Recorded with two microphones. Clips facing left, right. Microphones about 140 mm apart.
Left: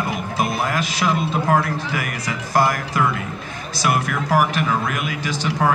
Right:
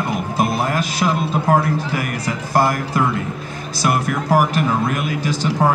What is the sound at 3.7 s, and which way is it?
Speech, 40° right (ahead or behind).